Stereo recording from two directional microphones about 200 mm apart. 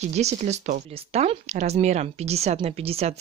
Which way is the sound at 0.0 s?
35° right (ahead or behind).